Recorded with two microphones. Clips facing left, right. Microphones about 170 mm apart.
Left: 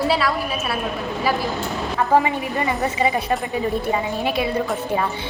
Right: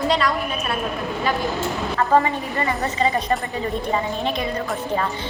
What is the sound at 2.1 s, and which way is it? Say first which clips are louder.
A woman's voice: left 1 dB; 15° left (ahead or behind).